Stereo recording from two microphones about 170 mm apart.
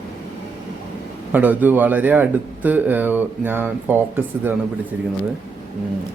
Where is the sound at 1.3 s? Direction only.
10° right (ahead or behind).